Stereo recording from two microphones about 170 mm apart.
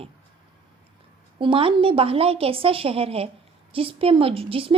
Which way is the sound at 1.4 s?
30° right (ahead or behind).